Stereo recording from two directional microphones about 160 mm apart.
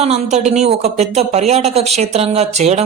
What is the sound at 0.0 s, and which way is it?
Speech, 40° right (ahead or behind).